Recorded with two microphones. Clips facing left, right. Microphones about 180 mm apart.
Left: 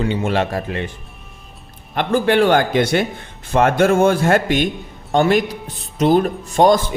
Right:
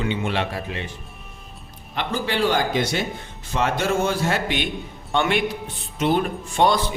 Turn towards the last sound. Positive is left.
turn(degrees=45)  # may be behind; listen again after turning